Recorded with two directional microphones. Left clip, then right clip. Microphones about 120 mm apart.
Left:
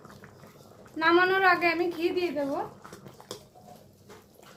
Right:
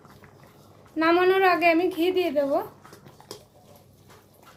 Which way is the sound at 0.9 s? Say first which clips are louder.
Right 2 dB; 55° right (ahead or behind).